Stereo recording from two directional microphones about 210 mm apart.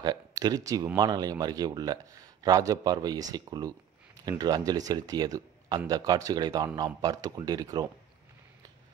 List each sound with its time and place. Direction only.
0.0 s speech: 20° right (ahead or behind)